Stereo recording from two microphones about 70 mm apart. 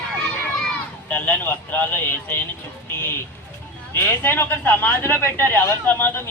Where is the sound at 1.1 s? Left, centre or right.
Left.